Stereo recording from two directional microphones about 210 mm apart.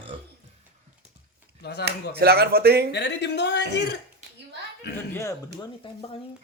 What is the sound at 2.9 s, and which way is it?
Speech, 55° left (ahead or behind).